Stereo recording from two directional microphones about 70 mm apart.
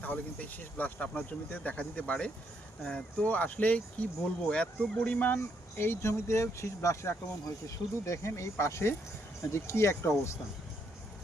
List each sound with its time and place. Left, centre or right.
0.0 s speech: left
5.3 s speech: left